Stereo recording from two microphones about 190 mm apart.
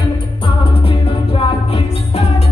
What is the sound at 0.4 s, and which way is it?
Music, 30° left (ahead or behind).